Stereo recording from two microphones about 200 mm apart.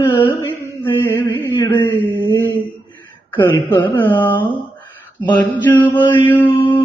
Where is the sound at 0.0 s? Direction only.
25° left (ahead or behind).